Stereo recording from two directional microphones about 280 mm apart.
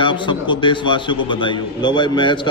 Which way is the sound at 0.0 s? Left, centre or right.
Centre.